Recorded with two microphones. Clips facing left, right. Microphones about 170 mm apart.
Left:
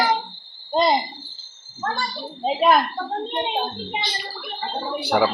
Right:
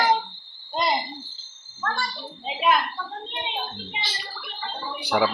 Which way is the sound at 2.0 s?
40° left (ahead or behind).